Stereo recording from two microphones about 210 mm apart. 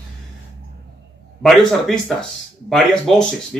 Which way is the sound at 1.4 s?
Centre (ahead or behind).